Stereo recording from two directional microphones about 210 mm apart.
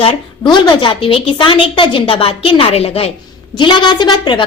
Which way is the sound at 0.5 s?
20° left (ahead or behind).